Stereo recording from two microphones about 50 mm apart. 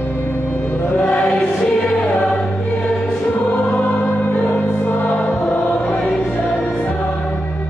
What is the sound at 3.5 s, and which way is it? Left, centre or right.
Music, left.